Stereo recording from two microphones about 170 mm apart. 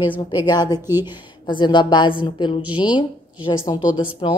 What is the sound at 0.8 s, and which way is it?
Speech, 15° right (ahead or behind).